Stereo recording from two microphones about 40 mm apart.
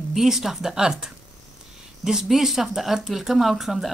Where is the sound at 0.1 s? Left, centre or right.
Centre.